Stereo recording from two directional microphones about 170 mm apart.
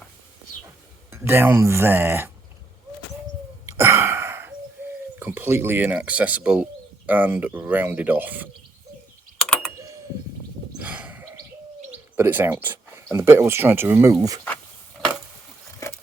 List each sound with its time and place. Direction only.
1.1 s speech: 15° right (ahead or behind)
3.7 s gasp: 15° right (ahead or behind)
4.8 s bird: 10° right (ahead or behind)
5.2 s speech: 15° right (ahead or behind)
9.7 s a sound: 20° right (ahead or behind)
10.8 s a sound: 10° right (ahead or behind)
11.9 s speech: 10° right (ahead or behind)